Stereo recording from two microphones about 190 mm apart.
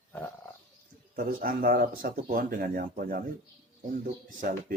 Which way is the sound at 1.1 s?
50° right (ahead or behind).